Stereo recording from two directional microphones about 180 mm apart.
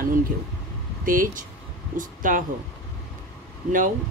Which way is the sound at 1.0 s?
50° right (ahead or behind).